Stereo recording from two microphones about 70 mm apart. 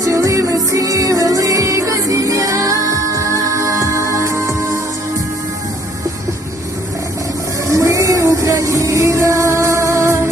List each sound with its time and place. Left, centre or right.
0.0 s music: right
7.7 s music: right